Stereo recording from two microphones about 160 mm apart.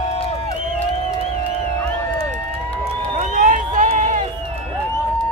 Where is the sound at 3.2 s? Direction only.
55° right (ahead or behind).